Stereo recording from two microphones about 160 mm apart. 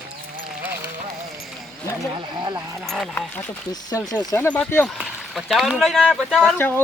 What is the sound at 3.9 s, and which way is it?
Speech, 20° left (ahead or behind).